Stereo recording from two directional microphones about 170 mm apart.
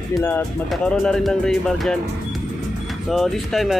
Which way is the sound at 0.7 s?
5° left (ahead or behind).